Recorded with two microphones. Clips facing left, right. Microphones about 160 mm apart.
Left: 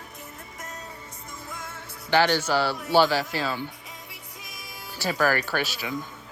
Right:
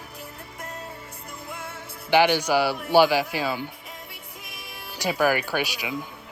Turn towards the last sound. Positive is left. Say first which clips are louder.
# right 1 dB
turn(degrees=-15)  # may be behind; listen again after turning